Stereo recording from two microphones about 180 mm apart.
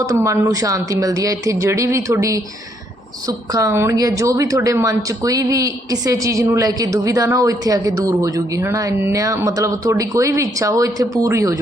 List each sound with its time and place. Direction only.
0.0 s a woman's voice: 20° right (ahead or behind)